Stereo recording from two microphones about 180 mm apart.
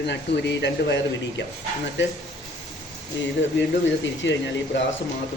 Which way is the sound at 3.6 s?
90° left.